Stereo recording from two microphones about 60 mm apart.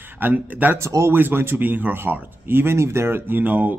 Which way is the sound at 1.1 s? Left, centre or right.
Right.